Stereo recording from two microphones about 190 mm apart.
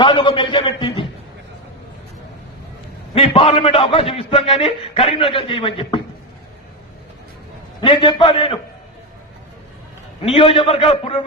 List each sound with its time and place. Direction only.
0.0 s a man's voice: 25° left (ahead or behind)
3.2 s a man's voice: 30° left (ahead or behind)
7.8 s a man's voice: 25° left (ahead or behind)
10.2 s a man's voice: 30° left (ahead or behind)